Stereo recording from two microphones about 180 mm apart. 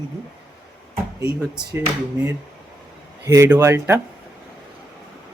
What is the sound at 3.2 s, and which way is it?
Speech, 15° right (ahead or behind).